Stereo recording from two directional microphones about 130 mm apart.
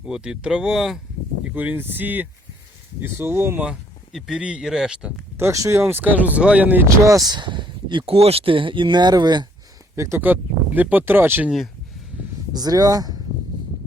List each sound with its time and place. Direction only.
0.0 s speech: 5° right (ahead or behind)
3.7 s speech: 5° right (ahead or behind)
5.4 s speech: 25° right (ahead or behind)
9.9 s speech: 20° right (ahead or behind)
12.5 s speech: 30° right (ahead or behind)